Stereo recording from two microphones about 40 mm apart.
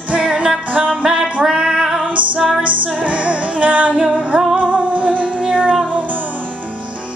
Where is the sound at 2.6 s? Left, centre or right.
Right.